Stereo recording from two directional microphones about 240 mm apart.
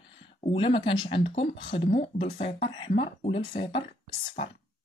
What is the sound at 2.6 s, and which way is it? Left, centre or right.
Speech, left.